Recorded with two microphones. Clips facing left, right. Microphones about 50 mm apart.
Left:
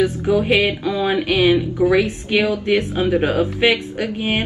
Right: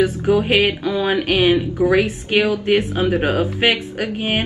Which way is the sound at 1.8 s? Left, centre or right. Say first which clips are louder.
Even; centre.